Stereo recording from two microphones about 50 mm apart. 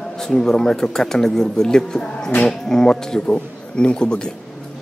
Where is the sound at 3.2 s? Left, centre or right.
Left.